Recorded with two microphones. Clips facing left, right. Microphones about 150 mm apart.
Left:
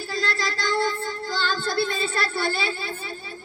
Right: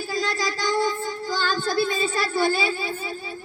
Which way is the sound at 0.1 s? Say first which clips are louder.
Right 1 dB; 15° right (ahead or behind).